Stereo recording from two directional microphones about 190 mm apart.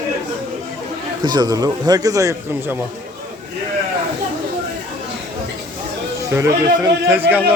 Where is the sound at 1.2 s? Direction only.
20° right (ahead or behind).